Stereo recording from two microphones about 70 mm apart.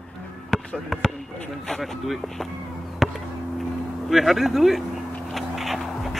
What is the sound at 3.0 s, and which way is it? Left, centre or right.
Chop, centre.